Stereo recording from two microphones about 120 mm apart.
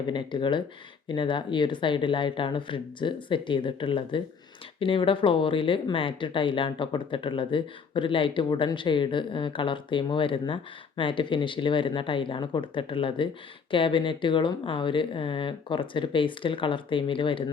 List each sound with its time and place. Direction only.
0.1 s speech: 40° left (ahead or behind)